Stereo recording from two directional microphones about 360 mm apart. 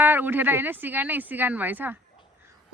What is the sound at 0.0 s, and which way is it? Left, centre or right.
Speech, centre.